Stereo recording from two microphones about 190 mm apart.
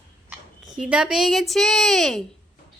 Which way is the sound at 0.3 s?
5° right (ahead or behind).